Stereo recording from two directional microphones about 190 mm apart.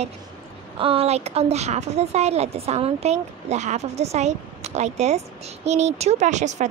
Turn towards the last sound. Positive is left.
turn(degrees=-40)  # may be behind; listen again after turning